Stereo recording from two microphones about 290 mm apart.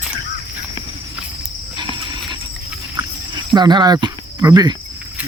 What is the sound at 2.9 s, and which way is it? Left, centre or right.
Cricket, centre.